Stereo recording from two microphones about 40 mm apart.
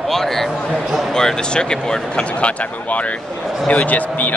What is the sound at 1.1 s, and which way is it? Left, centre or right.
Speech, centre.